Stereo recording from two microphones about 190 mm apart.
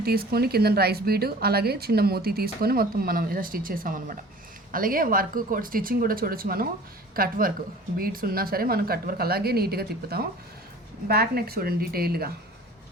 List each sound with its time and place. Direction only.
0.0 s speech: 55° right (ahead or behind)